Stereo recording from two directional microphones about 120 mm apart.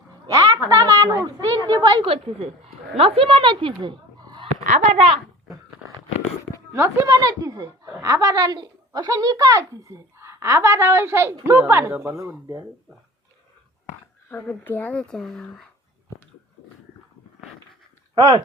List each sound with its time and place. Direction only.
0.3 s a sound: 30° right (ahead or behind)
0.7 s a woman's voice: 30° right (ahead or behind)
2.0 s a woman's voice: 55° right (ahead or behind)
6.7 s speech: 25° right (ahead or behind)
14.3 s speech: 15° left (ahead or behind)
18.1 s speech: 35° right (ahead or behind)